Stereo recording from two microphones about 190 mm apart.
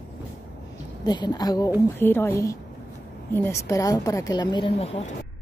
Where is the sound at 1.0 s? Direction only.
20° left (ahead or behind).